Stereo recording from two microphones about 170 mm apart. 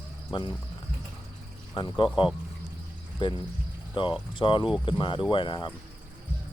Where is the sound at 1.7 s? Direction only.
25° left (ahead or behind).